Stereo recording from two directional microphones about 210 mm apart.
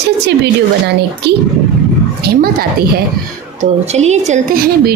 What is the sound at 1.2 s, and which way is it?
A woman's voice, 55° right (ahead or behind).